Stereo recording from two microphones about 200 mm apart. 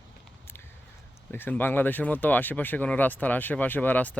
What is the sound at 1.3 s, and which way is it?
Speech, 10° left (ahead or behind).